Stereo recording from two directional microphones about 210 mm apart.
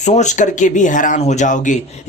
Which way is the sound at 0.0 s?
35° left (ahead or behind).